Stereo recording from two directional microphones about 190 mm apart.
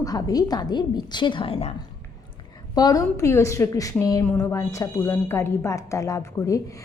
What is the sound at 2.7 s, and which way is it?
A woman's voice, 20° left (ahead or behind).